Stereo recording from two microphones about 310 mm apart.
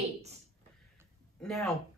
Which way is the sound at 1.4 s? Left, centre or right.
Centre.